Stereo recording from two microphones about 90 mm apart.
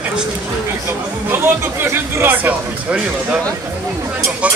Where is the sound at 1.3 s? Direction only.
25° right (ahead or behind).